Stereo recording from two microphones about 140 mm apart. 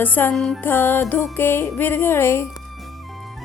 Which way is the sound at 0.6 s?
15° left (ahead or behind).